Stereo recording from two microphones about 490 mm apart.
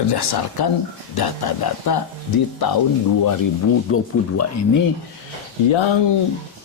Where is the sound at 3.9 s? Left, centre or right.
Left.